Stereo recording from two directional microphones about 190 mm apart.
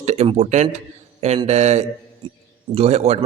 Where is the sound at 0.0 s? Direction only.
35° right (ahead or behind).